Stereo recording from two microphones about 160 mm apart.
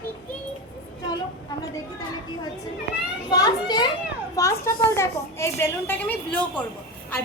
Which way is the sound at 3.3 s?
25° left (ahead or behind).